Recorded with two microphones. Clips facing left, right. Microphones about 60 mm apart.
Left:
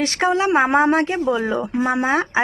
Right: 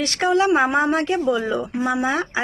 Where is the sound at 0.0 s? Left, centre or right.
Left.